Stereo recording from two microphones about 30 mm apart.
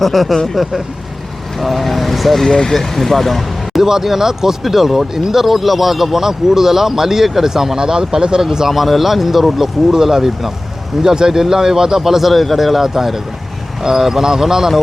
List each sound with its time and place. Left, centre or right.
0.0 s speech: centre
2.5 s speech: centre
2.7 s speech: centre
3.8 s speech: centre
8.4 s speech: centre
9.9 s speech: centre
11.0 s speech: right
12.3 s speech: centre
13.8 s speech: centre